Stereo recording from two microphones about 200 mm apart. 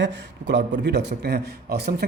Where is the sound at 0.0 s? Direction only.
60° right (ahead or behind).